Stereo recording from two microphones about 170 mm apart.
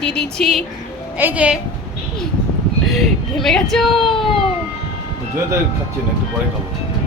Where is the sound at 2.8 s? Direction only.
Centre (ahead or behind).